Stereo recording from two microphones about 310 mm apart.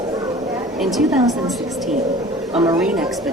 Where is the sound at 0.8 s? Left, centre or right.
Centre.